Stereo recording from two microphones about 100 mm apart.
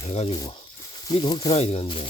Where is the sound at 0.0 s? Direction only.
90° left.